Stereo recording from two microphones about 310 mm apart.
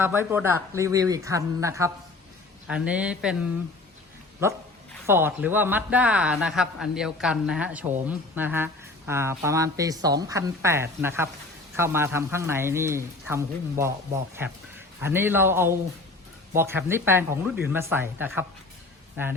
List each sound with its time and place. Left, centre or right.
0.0 s speech: centre
5.0 s speech: centre
15.0 s speech: centre